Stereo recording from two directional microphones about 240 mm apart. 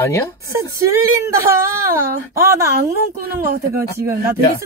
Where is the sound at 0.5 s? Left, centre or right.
Centre.